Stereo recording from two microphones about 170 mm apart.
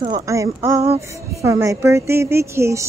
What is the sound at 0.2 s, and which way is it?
Speech, 20° right (ahead or behind).